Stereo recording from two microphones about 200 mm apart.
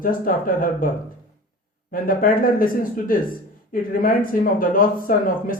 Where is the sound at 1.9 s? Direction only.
45° left (ahead or behind).